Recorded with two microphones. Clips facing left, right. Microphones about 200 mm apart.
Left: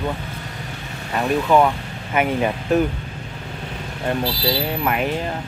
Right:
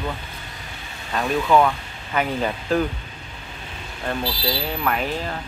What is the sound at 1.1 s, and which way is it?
Speech, 10° left (ahead or behind).